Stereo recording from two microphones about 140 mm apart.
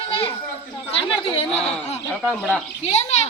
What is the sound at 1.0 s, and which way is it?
Chatter, 40° left (ahead or behind).